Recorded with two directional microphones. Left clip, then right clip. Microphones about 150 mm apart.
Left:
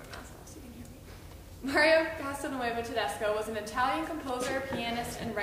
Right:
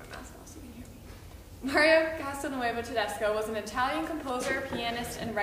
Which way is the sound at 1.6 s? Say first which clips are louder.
Right 1 dB; 15° right (ahead or behind).